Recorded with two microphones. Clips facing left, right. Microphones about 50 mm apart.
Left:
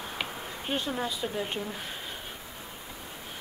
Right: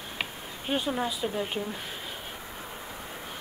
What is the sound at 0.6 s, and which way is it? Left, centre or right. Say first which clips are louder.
Speech: right 3 dB; centre.